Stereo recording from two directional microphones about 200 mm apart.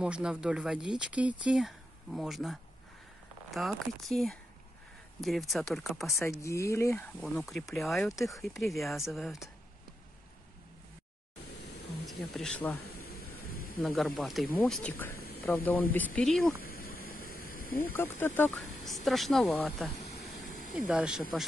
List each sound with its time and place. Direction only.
0.0 s speech: 5° right (ahead or behind)
6.0 s speech: 15° left (ahead or behind)
7.2 s speech: centre (ahead or behind)
12.1 s speech: centre (ahead or behind)
13.0 s a sound: 50° left (ahead or behind)
13.8 s speech: centre (ahead or behind)
15.1 s a sound: 50° left (ahead or behind)
15.4 s speech: 10° left (ahead or behind)
16.6 s a sound: 50° left (ahead or behind)
17.9 s speech: 10° left (ahead or behind)
20.2 s a sound: 50° left (ahead or behind)
20.7 s speech: 5° right (ahead or behind)